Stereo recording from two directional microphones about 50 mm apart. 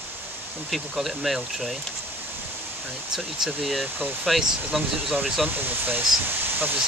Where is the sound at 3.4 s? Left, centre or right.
Centre.